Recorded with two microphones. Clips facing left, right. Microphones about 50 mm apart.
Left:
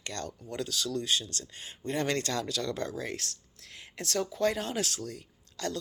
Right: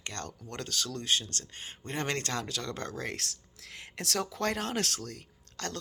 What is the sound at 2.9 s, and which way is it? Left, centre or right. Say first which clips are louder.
Speech: left 1 dB; right.